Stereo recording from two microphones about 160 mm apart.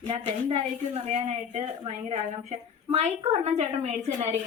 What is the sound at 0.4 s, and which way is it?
A woman's voice, 40° right (ahead or behind).